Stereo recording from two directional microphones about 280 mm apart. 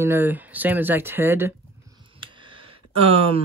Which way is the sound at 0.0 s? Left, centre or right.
Centre.